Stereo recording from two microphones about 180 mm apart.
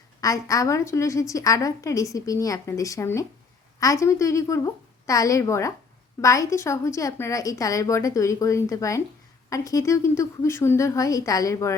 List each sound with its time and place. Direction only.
0.2 s a woman's voice: 20° left (ahead or behind)